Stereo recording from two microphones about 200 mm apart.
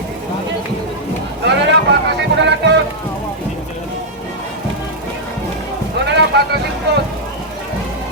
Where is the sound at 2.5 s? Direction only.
60° right (ahead or behind).